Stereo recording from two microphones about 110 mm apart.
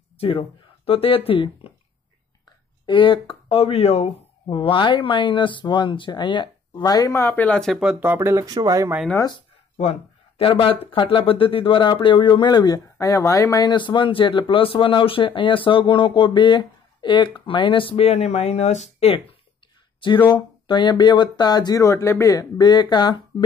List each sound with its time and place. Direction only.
0.8 s speech: 60° left (ahead or behind)
2.9 s speech: 50° left (ahead or behind); by 4.1 s 65° left (ahead or behind)
4.5 s speech: 50° left (ahead or behind)
7.2 s speech: 20° left (ahead or behind)
7.7 s speech: 10° right (ahead or behind); by 8.9 s 30° right (ahead or behind)
9.8 s a sound: 75° left (ahead or behind)
10.4 s speech: 55° left (ahead or behind)
20.2 s speech: 45° left (ahead or behind)